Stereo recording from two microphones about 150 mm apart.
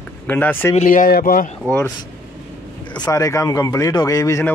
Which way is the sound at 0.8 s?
70° left (ahead or behind).